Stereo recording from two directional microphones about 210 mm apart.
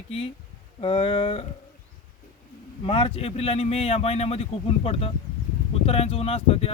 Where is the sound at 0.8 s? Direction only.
25° left (ahead or behind).